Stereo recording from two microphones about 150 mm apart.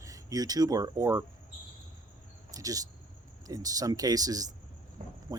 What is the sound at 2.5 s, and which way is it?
Speech, 25° right (ahead or behind).